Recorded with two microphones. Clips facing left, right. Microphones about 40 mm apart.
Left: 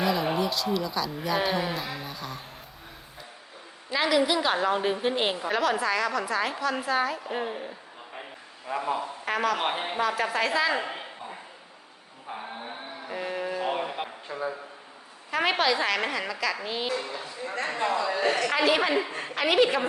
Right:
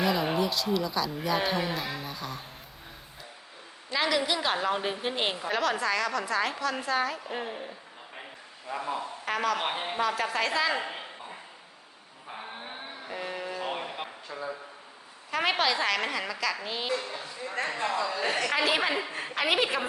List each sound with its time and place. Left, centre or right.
0.0 s a woman's voice: centre
3.9 s a woman's voice: centre
13.1 s a sound: centre
14.3 s a man's voice: centre
15.3 s a woman's voice: centre
18.4 s a woman's voice: centre